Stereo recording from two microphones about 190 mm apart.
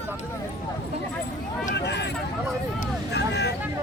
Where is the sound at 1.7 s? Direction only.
65° left (ahead or behind).